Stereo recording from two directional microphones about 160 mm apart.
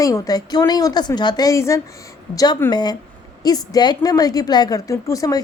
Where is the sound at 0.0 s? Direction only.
25° left (ahead or behind).